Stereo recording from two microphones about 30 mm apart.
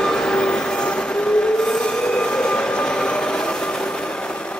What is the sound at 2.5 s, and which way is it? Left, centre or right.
Train, left.